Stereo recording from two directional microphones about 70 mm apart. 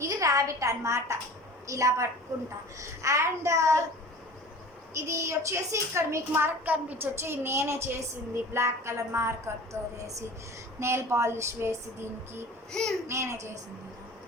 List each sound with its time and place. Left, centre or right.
0.0 s a woman's voice: right
4.9 s a woman's voice: right
6.5 s a woman's voice: right
7.2 s speech: right
12.7 s a child's voice: centre
13.1 s a woman's voice: right